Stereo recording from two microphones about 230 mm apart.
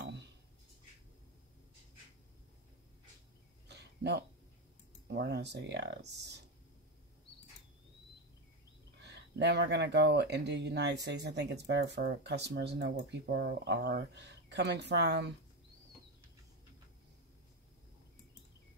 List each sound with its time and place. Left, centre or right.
3.6 s a sound: right
5.1 s speech: right
9.0 s speech: right